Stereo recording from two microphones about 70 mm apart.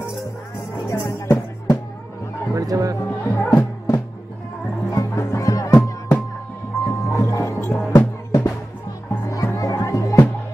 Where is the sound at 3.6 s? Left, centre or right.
Left.